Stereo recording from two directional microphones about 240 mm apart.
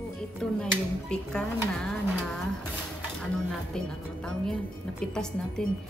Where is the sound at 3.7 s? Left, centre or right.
Centre.